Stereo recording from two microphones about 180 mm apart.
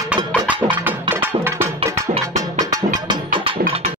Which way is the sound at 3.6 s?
35° right (ahead or behind).